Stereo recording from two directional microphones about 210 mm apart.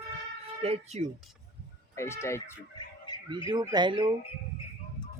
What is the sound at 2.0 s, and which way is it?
Speech, 10° left (ahead or behind).